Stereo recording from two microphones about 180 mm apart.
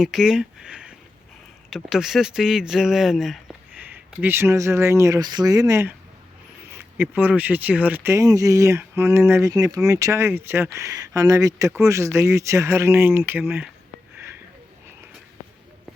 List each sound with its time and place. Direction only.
0.0 s speech: 5° right (ahead or behind)